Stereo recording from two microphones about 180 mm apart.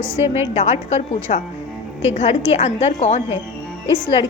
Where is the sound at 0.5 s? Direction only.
40° left (ahead or behind).